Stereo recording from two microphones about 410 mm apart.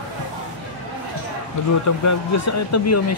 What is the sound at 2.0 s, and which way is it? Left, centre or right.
Speech, left.